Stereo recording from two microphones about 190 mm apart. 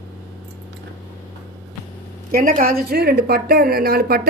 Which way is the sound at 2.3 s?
50° right (ahead or behind).